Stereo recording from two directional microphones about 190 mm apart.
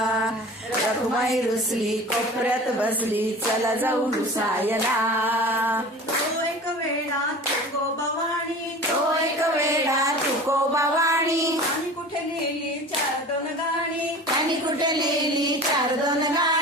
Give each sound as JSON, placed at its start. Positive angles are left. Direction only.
{"t": 2.5, "sound": "a woman's voice", "side_deg": -10}
{"t": 5.2, "sound": "a woman's voice", "side_deg": -10}
{"t": 9.4, "sound": "a sound", "side_deg": -15}
{"t": 10.5, "sound": "music", "side_deg": -15}
{"t": 14.8, "sound": "mantra", "side_deg": -20}
{"t": 16.0, "sound": "singing", "side_deg": -20}